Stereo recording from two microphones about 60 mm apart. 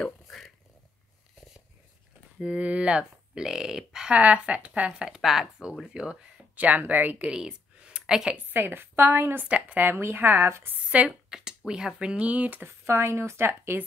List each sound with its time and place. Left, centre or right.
0.0 s a sound: centre
2.3 s speech: centre
6.5 s speech: right
7.3 s a sound: centre
8.4 s a woman's voice: right
9.5 s speech: right
9.8 s a woman's voice: right
11.1 s speech: centre; by 12.6 s right
12.6 s speech: right